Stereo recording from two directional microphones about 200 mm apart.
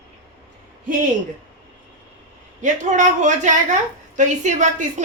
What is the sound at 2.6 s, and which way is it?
A woman's voice, 40° right (ahead or behind).